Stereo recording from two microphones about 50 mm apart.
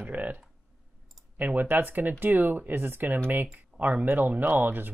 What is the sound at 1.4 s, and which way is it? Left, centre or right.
Speech, right.